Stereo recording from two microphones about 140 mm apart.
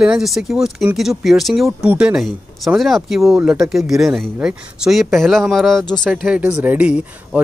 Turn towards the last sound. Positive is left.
turn(degrees=-10)  # may be behind; listen again after turning